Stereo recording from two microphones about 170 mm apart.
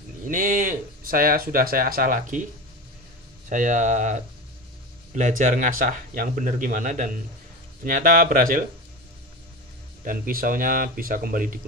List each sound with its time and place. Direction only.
0.3 s speech: 55° right (ahead or behind)
3.4 s a man's voice: 50° right (ahead or behind)
10.0 s speech: 55° right (ahead or behind)